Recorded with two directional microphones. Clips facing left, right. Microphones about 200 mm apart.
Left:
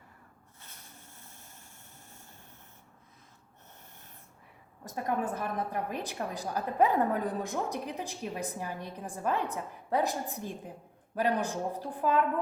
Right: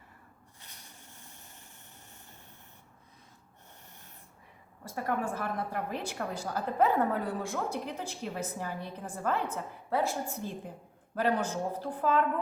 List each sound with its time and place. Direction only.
4.9 s a woman's voice: 20° left (ahead or behind)